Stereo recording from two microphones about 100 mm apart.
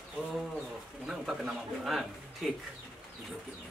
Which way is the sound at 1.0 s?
5° right (ahead or behind).